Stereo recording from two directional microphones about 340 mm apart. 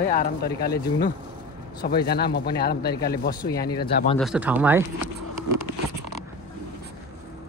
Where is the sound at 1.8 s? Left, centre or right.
Left.